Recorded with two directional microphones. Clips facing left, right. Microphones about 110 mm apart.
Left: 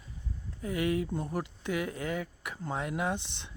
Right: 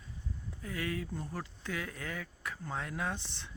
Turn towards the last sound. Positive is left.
turn(degrees=20)  # may be behind; listen again after turning